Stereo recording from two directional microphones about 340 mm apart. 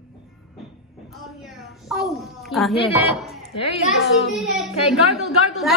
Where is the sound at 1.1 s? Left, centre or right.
Centre.